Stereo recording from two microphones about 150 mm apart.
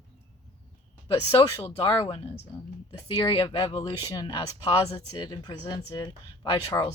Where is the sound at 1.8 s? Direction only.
40° left (ahead or behind).